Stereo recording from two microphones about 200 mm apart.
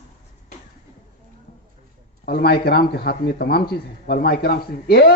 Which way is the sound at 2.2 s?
50° left (ahead or behind).